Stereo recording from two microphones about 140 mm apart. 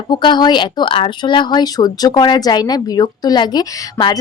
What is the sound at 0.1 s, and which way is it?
Speech, 30° left (ahead or behind).